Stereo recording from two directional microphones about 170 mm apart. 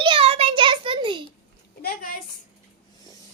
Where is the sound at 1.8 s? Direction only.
55° left (ahead or behind).